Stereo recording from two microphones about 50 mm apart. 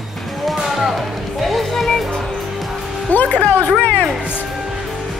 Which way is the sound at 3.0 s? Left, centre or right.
Left.